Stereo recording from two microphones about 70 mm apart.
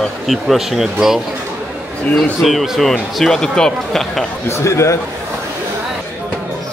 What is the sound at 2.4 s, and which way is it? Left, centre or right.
Speech, centre.